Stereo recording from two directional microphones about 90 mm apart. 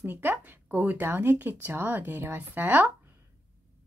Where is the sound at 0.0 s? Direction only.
25° right (ahead or behind).